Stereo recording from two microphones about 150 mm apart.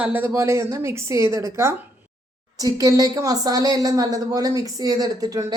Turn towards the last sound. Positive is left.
turn(degrees=-25)  # may be behind; listen again after turning